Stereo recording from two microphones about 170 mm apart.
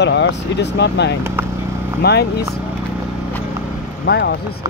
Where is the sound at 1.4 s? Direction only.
15° right (ahead or behind).